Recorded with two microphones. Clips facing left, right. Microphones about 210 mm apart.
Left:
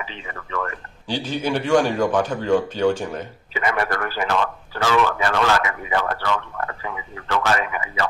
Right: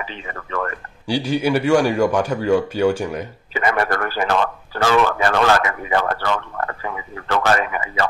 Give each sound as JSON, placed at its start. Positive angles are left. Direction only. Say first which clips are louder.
{"t": 0.0, "sound": "speech", "louder": "right 3 dB", "side_deg": -50}
{"t": 1.0, "sound": "speech", "louder": "right 5 dB", "side_deg": -10}
{"t": 3.5, "sound": "speech", "louder": "right 3 dB", "side_deg": -45}